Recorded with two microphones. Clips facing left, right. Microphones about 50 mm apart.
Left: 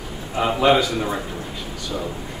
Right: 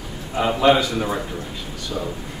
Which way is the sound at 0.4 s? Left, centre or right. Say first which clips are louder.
Even; centre.